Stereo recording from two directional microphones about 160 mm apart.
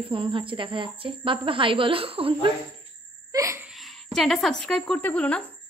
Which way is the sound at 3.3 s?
20° right (ahead or behind).